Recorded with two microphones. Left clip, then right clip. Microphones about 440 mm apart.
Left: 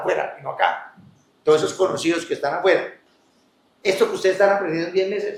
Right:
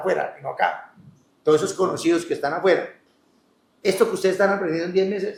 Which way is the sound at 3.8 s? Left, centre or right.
Right.